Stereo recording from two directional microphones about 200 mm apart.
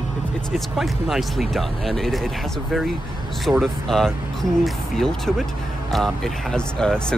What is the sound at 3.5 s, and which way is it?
Speech, centre (ahead or behind).